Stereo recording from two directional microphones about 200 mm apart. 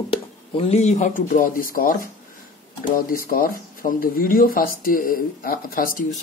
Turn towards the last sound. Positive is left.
turn(degrees=40)  # may be behind; listen again after turning